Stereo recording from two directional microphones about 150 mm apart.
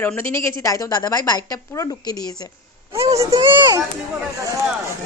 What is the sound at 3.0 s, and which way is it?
Speech, 20° right (ahead or behind).